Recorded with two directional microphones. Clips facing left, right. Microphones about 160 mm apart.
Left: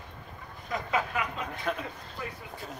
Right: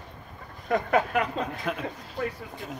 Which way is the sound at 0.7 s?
60° right (ahead or behind).